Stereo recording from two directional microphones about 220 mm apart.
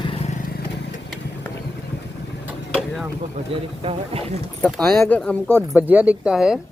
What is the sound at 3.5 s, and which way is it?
Speech, 25° right (ahead or behind).